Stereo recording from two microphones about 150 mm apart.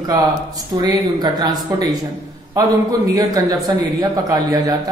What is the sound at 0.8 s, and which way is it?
A man's voice, 25° right (ahead or behind).